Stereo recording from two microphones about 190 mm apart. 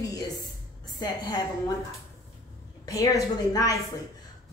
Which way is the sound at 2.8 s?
15° left (ahead or behind).